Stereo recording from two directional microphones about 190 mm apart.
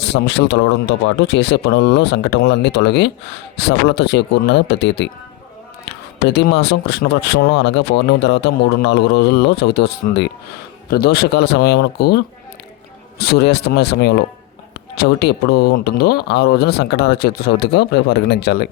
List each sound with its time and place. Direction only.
0.0 s speech: 65° left (ahead or behind)